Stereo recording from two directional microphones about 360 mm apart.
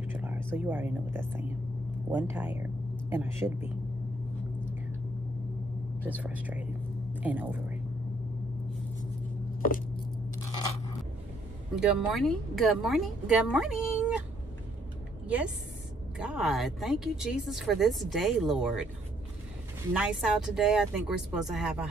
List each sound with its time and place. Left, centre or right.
0.1 s a woman's voice: centre
5.9 s a woman's voice: centre
9.6 s squish: left
11.7 s a woman's voice: centre
15.2 s a woman's voice: centre
19.9 s a woman's voice: centre